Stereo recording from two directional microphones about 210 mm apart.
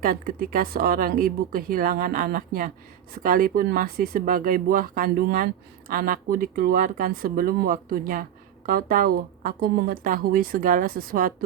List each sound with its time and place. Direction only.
0.0 s speech: 45° right (ahead or behind)